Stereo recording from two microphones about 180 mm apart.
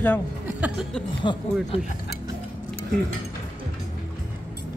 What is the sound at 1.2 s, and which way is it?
Speech, 25° left (ahead or behind).